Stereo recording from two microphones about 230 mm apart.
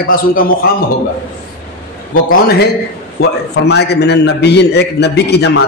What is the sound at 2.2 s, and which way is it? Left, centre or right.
A man's voice, left.